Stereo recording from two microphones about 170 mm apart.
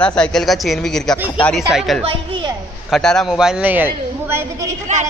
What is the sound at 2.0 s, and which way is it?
Speech, 30° right (ahead or behind).